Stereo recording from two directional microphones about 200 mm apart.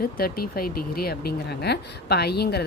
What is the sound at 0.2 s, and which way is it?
Speech, 50° left (ahead or behind).